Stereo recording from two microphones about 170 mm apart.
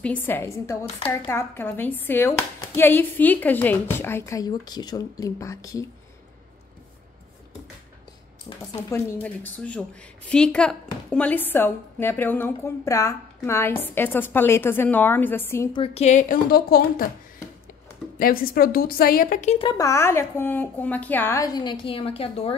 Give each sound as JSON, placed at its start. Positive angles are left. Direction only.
{"t": 0.0, "sound": "a woman's voice", "side_deg": 10}
{"t": 8.9, "sound": "a woman's voice", "side_deg": 10}
{"t": 15.7, "sound": "a woman's voice", "side_deg": 35}
{"t": 16.4, "sound": "a woman's voice", "side_deg": 60}
{"t": 18.2, "sound": "a woman's voice", "side_deg": 60}
{"t": 19.6, "sound": "a woman's voice", "side_deg": 25}